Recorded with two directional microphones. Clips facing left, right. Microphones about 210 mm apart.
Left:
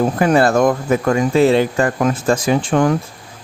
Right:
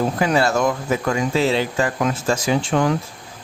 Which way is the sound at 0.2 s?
50° left (ahead or behind).